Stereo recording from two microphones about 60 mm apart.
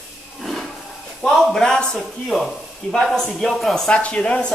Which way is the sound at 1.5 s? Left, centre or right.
Centre.